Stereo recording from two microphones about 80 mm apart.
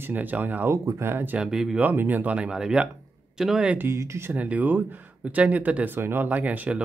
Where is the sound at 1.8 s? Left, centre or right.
Right; by 3.7 s centre.